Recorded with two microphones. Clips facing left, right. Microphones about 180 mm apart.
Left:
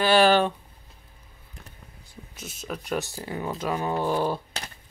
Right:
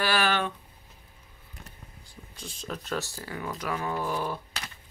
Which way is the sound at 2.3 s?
5° left (ahead or behind).